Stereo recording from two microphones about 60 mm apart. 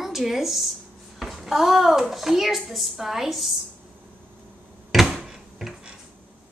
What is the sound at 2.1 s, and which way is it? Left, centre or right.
A woman's voice, centre.